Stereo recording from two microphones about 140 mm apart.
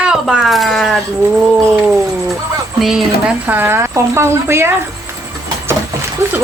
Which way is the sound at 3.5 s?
15° right (ahead or behind).